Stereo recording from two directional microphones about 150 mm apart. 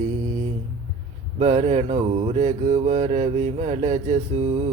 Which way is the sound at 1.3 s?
45° right (ahead or behind).